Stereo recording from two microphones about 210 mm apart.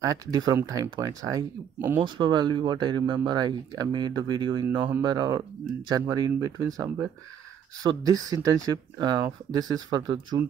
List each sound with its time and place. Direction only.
0.0 s speech: 15° right (ahead or behind)
2.0 s speech: 20° right (ahead or behind)